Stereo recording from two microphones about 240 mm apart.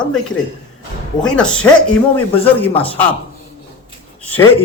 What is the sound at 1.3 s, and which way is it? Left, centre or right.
A man's voice, centre.